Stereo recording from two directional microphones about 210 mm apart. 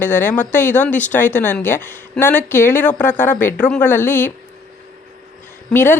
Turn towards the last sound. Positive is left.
turn(degrees=10)  # may be behind; listen again after turning